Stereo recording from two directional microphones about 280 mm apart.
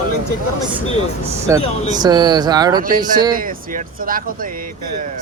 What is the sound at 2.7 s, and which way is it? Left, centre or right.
Speech, right.